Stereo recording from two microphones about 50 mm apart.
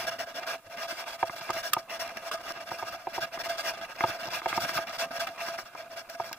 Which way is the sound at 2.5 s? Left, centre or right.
Left.